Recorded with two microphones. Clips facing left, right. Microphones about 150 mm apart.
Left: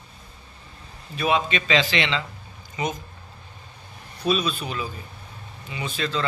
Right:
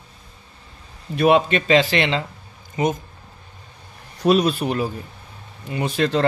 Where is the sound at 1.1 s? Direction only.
60° right (ahead or behind).